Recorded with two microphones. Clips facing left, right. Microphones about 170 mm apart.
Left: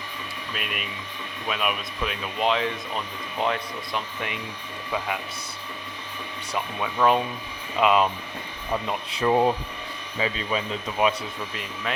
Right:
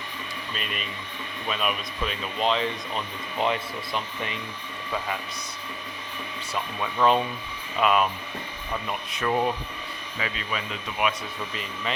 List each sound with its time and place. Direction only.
0.5 s speech: 5° left (ahead or behind)
6.5 s speech: 5° left (ahead or behind)
7.8 s speech: 20° left (ahead or behind)
11.5 s speech: centre (ahead or behind)